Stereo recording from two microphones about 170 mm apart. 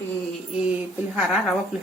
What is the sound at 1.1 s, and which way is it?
Speech, centre (ahead or behind).